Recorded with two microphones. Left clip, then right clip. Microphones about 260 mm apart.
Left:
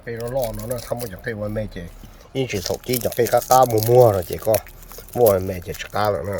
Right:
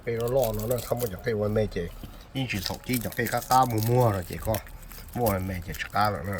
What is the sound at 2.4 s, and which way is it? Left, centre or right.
Speech, left.